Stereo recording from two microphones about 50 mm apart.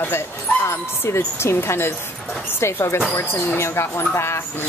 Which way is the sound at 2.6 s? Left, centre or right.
Left.